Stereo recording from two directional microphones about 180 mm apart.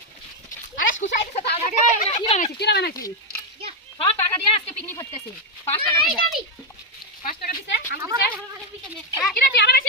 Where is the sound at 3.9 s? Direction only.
30° left (ahead or behind).